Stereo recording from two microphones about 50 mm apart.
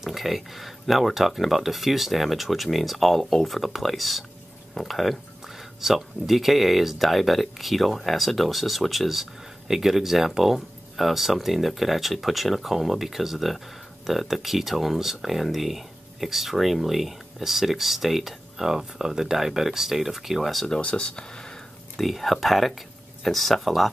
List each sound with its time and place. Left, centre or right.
0.0 s speech: centre
20.8 s speech: centre
21.9 s speech: centre